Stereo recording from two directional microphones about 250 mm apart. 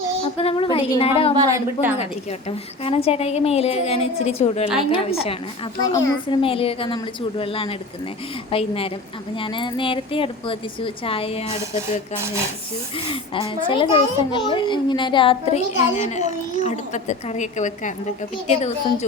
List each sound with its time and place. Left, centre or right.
0.3 s a child's voice: left
1.4 s a woman's voice: centre
2.8 s a child's voice: left
12.1 s a woman's voice: centre
13.1 s a child's voice: centre